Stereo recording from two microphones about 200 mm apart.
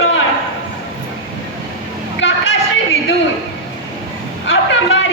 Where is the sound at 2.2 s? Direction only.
65° left (ahead or behind).